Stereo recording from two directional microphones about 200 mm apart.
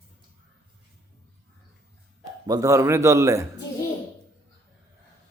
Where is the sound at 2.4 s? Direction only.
15° right (ahead or behind).